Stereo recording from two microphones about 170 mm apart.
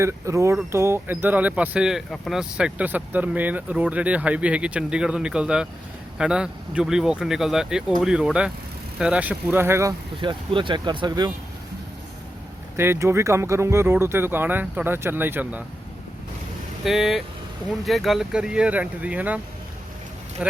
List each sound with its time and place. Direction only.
0.0 s speech: 15° right (ahead or behind)
10.2 s speech: 30° right (ahead or behind)
12.7 s speech: 15° right (ahead or behind)
16.8 s speech: centre (ahead or behind)
20.4 s speech: 5° right (ahead or behind)